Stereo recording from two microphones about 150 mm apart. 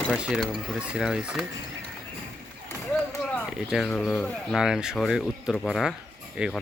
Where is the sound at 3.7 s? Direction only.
5° left (ahead or behind).